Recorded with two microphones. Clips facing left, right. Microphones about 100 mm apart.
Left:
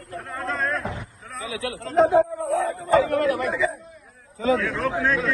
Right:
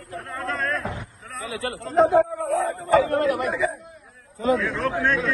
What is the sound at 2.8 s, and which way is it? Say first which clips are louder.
Speech: even; 35° right (ahead or behind).